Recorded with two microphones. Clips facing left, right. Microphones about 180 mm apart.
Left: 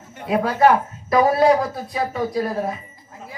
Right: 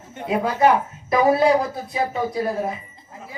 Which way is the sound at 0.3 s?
20° right (ahead or behind).